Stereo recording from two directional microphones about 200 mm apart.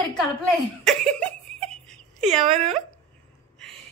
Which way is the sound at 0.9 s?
5° left (ahead or behind).